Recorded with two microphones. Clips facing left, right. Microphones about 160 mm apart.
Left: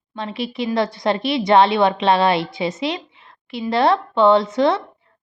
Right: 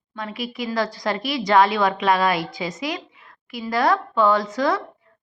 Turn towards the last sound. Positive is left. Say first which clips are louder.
# left 5 dB
turn(degrees=25)  # may be behind; listen again after turning